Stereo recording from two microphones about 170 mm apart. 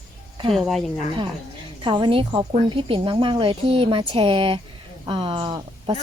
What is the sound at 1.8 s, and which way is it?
A woman's voice, 30° right (ahead or behind).